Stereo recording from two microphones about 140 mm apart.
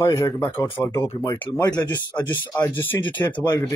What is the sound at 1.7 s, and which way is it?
Speech, 30° left (ahead or behind).